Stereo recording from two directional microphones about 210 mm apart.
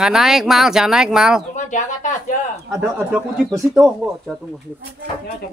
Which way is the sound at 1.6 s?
35° left (ahead or behind).